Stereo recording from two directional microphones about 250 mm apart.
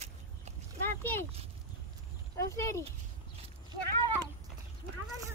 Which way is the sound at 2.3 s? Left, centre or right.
Centre.